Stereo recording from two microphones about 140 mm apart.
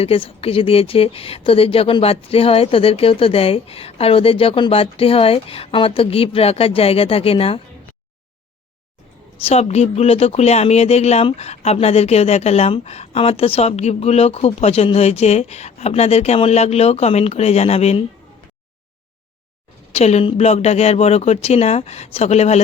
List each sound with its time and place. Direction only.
0.0 s speech: 45° left (ahead or behind)
9.4 s speech: 50° left (ahead or behind)
19.9 s speech: 50° left (ahead or behind)